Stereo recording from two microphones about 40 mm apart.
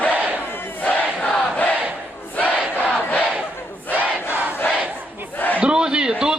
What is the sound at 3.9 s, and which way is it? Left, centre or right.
Crowd, left.